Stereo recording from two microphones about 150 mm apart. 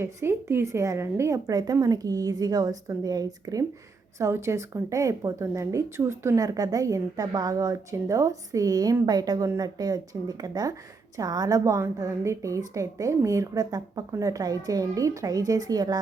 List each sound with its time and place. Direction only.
0.0 s speech: 15° right (ahead or behind)